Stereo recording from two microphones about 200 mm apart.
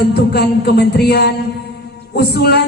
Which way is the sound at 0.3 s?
50° left (ahead or behind).